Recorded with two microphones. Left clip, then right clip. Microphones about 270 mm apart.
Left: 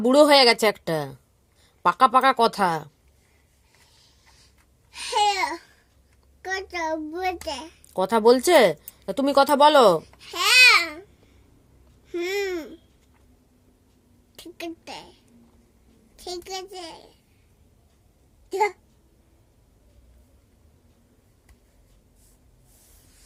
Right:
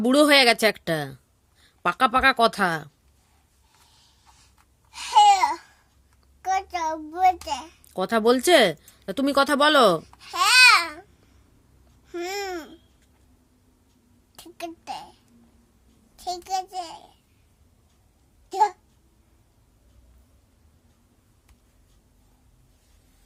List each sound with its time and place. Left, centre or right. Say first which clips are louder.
0.0 s a child's voice: left 2 dB; centre
4.9 s babbling: right 6 dB; centre
6.7 s a child's voice: even; centre
12.0 s babbling: left 3 dB; centre
14.3 s a sound: left 1 dB; centre
16.1 s a child's voice: right 6 dB; centre